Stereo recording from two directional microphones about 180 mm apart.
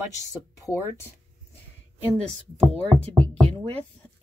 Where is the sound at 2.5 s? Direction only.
35° right (ahead or behind).